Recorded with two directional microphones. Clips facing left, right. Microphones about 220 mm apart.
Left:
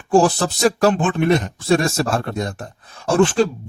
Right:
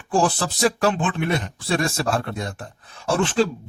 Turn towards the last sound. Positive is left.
turn(degrees=45)  # may be behind; listen again after turning